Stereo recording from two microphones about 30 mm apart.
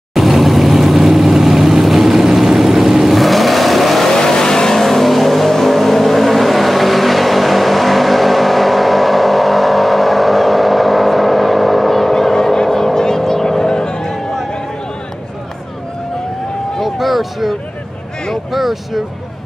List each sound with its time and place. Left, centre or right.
0.1 s vehicle: centre
3.1 s vehicle: centre
4.1 s vehicle: centre
4.7 s vehicle: centre; by 14.6 s left
16.8 s a sound: centre